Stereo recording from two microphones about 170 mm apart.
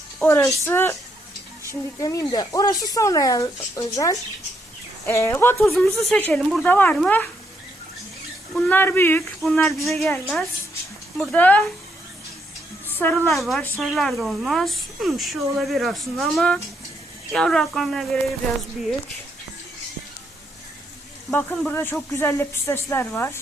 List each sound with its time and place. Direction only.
0.2 s speech: 15° left (ahead or behind)
5.7 s speech: centre (ahead or behind)
8.5 s speech: 10° left (ahead or behind)
12.9 s a woman's voice: 10° left (ahead or behind)
13.3 s speech: centre (ahead or behind)
21.3 s speech: 10° left (ahead or behind)